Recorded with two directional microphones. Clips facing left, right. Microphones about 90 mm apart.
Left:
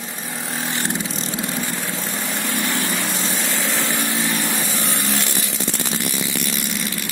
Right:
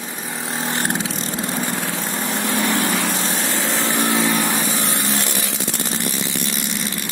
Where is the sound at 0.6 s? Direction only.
50° right (ahead or behind).